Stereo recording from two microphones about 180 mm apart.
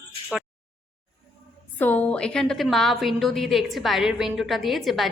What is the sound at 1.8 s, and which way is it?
A woman's voice, 10° left (ahead or behind).